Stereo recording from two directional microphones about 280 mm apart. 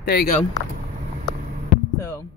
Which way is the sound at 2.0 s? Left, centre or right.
Centre.